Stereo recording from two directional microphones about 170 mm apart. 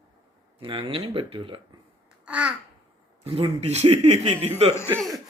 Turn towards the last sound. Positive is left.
turn(degrees=10)  # may be behind; listen again after turning